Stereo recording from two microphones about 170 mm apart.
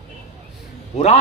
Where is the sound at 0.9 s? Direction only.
40° left (ahead or behind).